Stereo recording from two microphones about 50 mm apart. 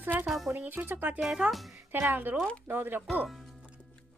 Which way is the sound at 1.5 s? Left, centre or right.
Centre.